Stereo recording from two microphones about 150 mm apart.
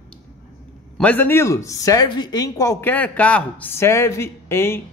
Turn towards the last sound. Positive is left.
turn(degrees=15)  # may be behind; listen again after turning